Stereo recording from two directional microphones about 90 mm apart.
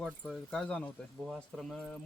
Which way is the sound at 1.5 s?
5° left (ahead or behind).